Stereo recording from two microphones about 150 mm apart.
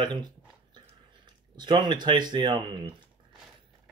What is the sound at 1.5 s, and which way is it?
Speech, 30° right (ahead or behind).